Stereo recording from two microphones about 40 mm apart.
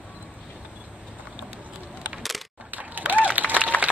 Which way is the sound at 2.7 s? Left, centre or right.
Right.